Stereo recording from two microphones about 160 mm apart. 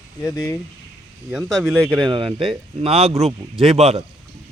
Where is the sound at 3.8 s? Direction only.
45° right (ahead or behind).